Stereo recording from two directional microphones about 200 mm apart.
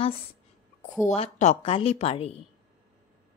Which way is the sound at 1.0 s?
35° left (ahead or behind).